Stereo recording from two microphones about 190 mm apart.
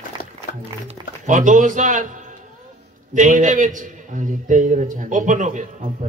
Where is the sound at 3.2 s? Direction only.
40° right (ahead or behind).